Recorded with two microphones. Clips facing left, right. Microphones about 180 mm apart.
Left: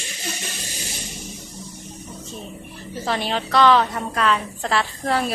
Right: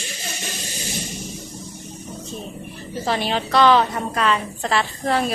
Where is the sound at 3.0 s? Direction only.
Centre (ahead or behind).